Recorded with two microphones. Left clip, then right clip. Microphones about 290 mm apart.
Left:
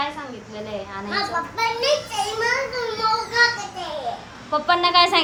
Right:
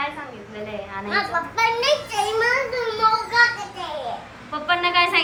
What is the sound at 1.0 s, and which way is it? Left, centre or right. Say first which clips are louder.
A child's voice: right 2 dB; centre.